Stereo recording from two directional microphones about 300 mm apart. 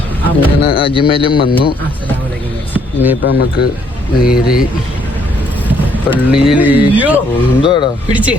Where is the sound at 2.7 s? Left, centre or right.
Centre.